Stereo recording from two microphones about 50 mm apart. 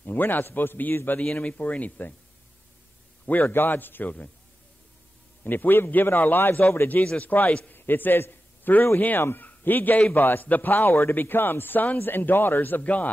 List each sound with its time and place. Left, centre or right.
0.0 s a man's voice: left
1.2 s a man's voice: left
3.3 s a man's voice: left
5.4 s a man's voice: left
7.2 s a man's voice: left
12.8 s speech: left